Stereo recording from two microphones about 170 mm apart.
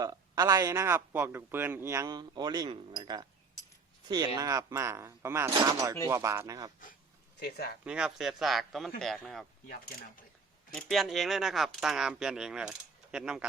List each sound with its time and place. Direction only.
0.0 s a man's voice: 20° right (ahead or behind)
4.4 s speech: 20° right (ahead or behind)
7.3 s speech: 70° left (ahead or behind)
7.9 s speech: 5° right (ahead or behind)
10.8 s speech: centre (ahead or behind)